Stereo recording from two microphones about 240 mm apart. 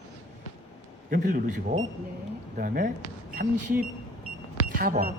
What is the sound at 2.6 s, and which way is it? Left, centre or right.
Speech, right.